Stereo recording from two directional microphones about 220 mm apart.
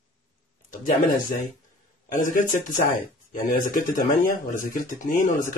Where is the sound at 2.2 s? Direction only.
35° left (ahead or behind).